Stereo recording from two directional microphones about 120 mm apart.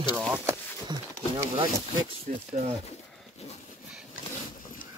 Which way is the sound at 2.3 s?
90° right.